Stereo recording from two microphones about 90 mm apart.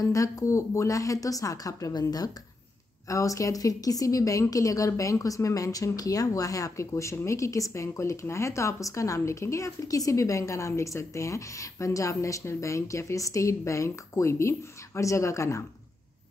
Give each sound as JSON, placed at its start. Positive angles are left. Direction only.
{"t": 0.0, "sound": "a woman's voice", "side_deg": 35}
{"t": 3.1, "sound": "a woman's voice", "side_deg": 35}